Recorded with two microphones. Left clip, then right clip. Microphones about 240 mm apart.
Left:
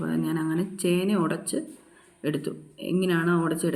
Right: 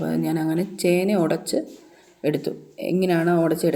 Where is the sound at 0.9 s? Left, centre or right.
Centre.